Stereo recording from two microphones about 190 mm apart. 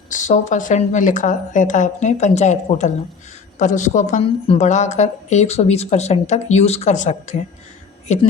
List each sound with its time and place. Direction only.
0.1 s a woman's voice: 40° left (ahead or behind)